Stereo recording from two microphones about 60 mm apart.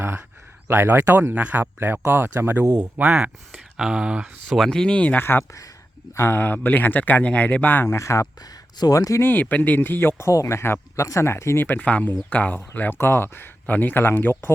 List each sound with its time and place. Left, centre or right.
0.7 s speech: right
1.4 s speech: right
2.7 s speech: right
3.1 s speech: centre
4.5 s speech: centre
4.9 s speech: left
5.2 s speech: left
7.9 s speech: left
8.9 s speech: left
9.2 s speech: left
11.8 s speech: left